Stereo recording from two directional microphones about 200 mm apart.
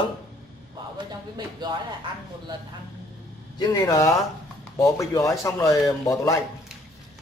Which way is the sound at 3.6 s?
20° left (ahead or behind).